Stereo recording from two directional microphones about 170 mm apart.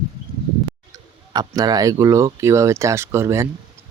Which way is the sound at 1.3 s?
20° right (ahead or behind).